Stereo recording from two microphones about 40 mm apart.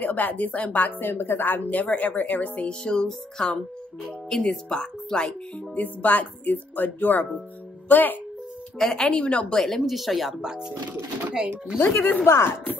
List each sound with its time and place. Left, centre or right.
0.0 s speech: left
2.8 s a woman's voice: left
5.8 s speech: left
8.7 s speech: centre
9.1 s a woman's voice: left
9.8 s speech: centre
10.4 s speech: centre
12.0 s speech: left
12.3 s speech: left